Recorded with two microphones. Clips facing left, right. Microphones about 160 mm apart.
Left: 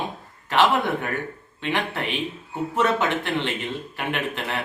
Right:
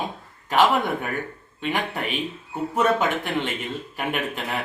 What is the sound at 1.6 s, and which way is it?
Speech, 10° right (ahead or behind).